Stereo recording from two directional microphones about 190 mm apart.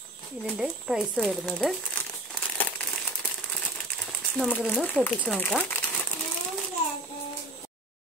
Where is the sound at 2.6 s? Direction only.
10° left (ahead or behind).